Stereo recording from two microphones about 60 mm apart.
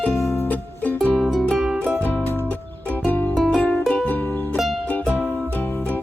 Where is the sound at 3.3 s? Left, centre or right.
Centre.